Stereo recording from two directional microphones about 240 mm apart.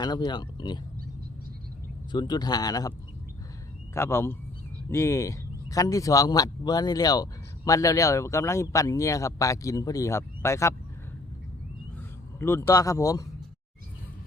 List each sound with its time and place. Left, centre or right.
0.0 s speech: centre
2.1 s speech: centre
3.9 s speech: centre
12.4 s speech: centre